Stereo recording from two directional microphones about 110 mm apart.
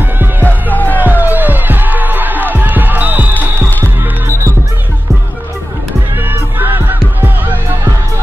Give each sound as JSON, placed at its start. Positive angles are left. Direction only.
{"t": 0.4, "sound": "music", "side_deg": 15}
{"t": 1.0, "sound": "music", "side_deg": -15}
{"t": 6.2, "sound": "music", "side_deg": -20}